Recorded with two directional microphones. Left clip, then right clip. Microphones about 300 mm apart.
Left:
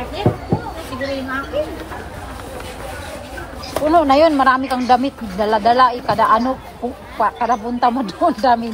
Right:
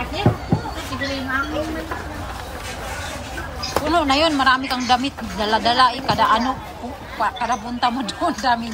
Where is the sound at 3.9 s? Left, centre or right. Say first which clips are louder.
Left 6 dB; centre.